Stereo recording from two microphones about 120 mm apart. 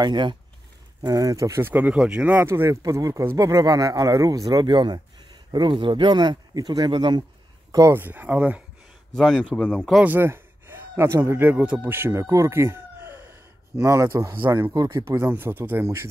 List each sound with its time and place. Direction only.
0.0 s speech: 40° right (ahead or behind)
7.7 s speech: 25° right (ahead or behind)
8.0 s speech: 15° right (ahead or behind)
9.1 s speech: 5° left (ahead or behind)
10.0 s speech: 20° right (ahead or behind)
14.7 s speech: 35° right (ahead or behind)